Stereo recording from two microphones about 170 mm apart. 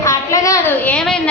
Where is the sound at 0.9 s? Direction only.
5° left (ahead or behind).